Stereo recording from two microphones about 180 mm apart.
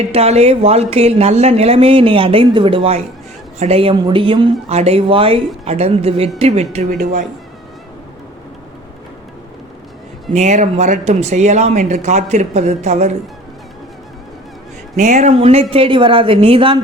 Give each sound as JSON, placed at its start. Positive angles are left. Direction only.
{"t": 0.1, "sound": "a woman's voice", "side_deg": -35}
{"t": 10.3, "sound": "speech", "side_deg": -40}
{"t": 14.9, "sound": "a woman's voice", "side_deg": -40}